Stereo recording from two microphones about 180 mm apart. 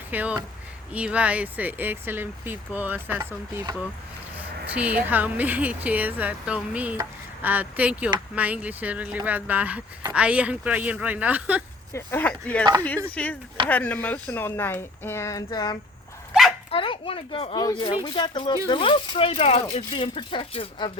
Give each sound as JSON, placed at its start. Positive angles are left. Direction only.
{"t": 0.1, "sound": "speech", "side_deg": -10}
{"t": 11.9, "sound": "speech", "side_deg": 10}
{"t": 16.6, "sound": "a sound", "side_deg": 30}
{"t": 17.6, "sound": "speech", "side_deg": 25}